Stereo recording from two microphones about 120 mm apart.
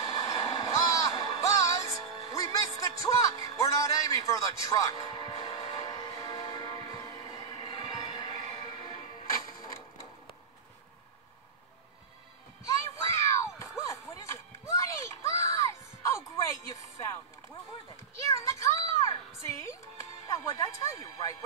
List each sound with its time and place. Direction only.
0.0 s music: 30° left (ahead or behind)
12.6 s a sound: 25° left (ahead or behind)
18.2 s music: 25° left (ahead or behind)